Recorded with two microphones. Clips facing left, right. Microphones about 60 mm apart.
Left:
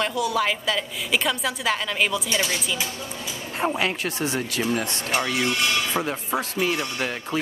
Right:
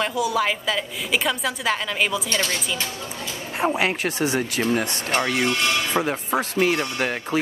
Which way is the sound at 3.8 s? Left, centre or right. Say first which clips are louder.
Right 3 dB; right.